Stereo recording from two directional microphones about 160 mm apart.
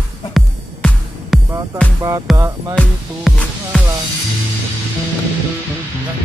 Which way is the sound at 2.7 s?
Centre (ahead or behind).